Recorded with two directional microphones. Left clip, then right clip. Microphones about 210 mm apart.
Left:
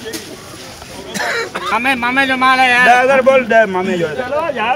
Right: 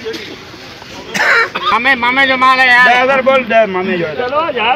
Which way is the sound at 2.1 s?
40° left (ahead or behind).